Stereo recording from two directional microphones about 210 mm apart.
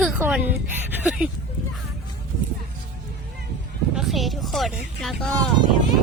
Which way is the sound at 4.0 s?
Centre (ahead or behind).